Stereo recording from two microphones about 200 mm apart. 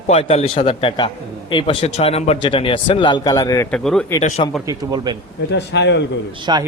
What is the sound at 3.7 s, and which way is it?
Speech, 5° left (ahead or behind).